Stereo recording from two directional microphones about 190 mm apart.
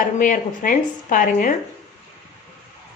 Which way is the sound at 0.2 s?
45° left (ahead or behind).